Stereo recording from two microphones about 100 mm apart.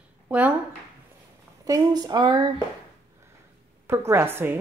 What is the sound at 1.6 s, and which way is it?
Speech, 40° right (ahead or behind).